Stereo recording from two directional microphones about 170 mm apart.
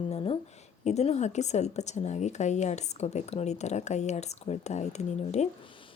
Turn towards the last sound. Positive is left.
turn(degrees=35)  # may be behind; listen again after turning